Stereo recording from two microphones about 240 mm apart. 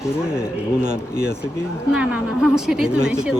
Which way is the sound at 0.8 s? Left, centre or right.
Right.